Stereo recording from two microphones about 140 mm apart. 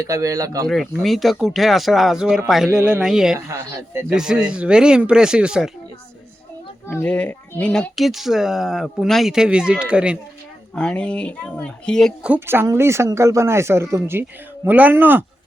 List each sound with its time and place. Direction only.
0.0 s speech: 25° right (ahead or behind)
1.0 s speech: centre (ahead or behind)
3.3 s speech: 20° right (ahead or behind)
4.1 s speech: 5° right (ahead or behind)
6.8 s speech: 15° left (ahead or behind); by 10.2 s 5° right (ahead or behind)
10.8 s speech: 5° left (ahead or behind)
12.2 s speech: 15° right (ahead or behind)